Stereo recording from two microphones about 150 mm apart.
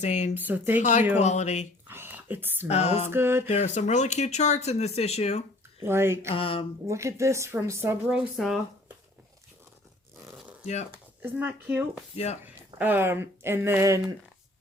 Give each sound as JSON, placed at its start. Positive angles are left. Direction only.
{"t": 0.0, "sound": "speech", "side_deg": 50}
{"t": 0.3, "sound": "speech", "side_deg": -10}
{"t": 0.8, "sound": "speech", "side_deg": 55}
{"t": 1.9, "sound": "whispering", "side_deg": -15}
{"t": 2.6, "sound": "speech", "side_deg": 45}
{"t": 3.1, "sound": "speech", "side_deg": -15}
{"t": 3.5, "sound": "speech", "side_deg": 50}
{"t": 5.8, "sound": "speech", "side_deg": -15}
{"t": 6.3, "sound": "speech", "side_deg": 35}
{"t": 6.8, "sound": "speech", "side_deg": -20}
{"t": 8.1, "sound": "speech", "side_deg": -5}
{"t": 11.2, "sound": "speech", "side_deg": -10}
{"t": 12.1, "sound": "speech", "side_deg": 45}
{"t": 12.8, "sound": "speech", "side_deg": -15}